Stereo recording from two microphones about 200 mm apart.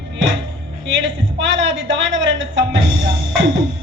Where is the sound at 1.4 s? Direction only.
70° right (ahead or behind).